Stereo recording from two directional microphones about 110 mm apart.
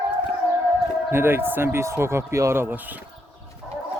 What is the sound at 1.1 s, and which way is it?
Speech, 20° right (ahead or behind).